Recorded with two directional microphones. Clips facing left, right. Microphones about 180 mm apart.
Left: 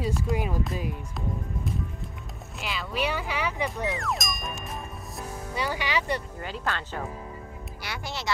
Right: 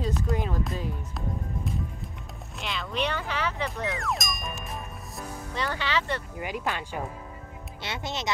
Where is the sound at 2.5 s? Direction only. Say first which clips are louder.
Even; 5° left (ahead or behind).